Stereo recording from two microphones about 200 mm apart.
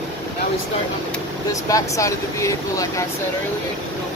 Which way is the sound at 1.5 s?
15° left (ahead or behind).